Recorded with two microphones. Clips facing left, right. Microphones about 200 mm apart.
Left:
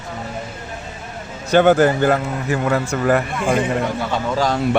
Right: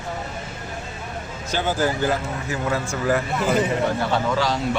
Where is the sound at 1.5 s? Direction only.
65° left (ahead or behind).